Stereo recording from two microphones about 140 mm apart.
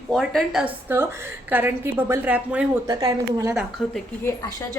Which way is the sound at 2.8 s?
25° right (ahead or behind).